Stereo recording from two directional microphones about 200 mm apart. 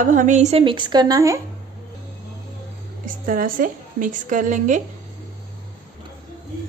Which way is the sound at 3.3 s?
45° right (ahead or behind).